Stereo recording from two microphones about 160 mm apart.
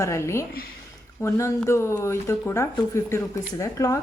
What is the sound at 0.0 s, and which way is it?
Speech, 15° left (ahead or behind).